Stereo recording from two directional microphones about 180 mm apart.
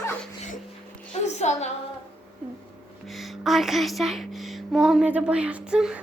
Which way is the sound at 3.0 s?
Centre (ahead or behind).